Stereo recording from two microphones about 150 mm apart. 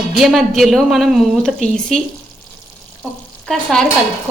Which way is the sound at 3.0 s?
5° left (ahead or behind).